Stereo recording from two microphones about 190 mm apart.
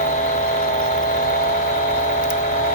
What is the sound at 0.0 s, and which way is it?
Vehicle, 40° left (ahead or behind).